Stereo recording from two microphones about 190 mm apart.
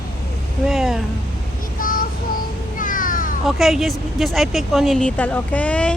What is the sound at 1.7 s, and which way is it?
Child singing, 50° left (ahead or behind).